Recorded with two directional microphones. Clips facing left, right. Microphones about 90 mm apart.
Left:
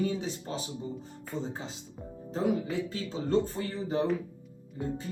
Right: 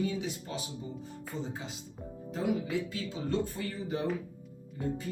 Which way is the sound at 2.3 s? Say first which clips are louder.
Left 2 dB; 35° left (ahead or behind).